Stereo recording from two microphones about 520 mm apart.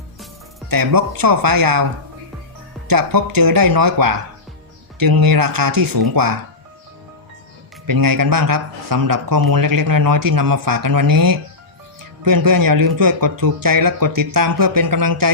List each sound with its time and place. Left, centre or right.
0.7 s speech: right
7.9 s speech: right